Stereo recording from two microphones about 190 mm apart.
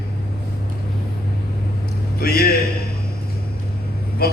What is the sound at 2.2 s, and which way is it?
Speech, 50° left (ahead or behind).